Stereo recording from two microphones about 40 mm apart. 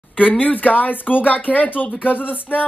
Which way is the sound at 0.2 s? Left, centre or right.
Left.